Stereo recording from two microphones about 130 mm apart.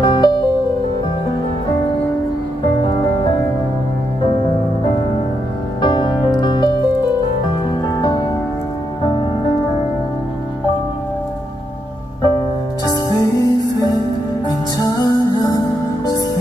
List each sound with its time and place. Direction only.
0.0 s music: 35° left (ahead or behind)
5.8 s music: 35° left (ahead or behind)
8.0 s music: 30° left (ahead or behind)
12.2 s music: 25° left (ahead or behind)